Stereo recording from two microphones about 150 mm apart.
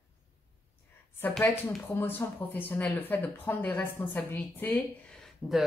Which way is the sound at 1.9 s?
15° left (ahead or behind).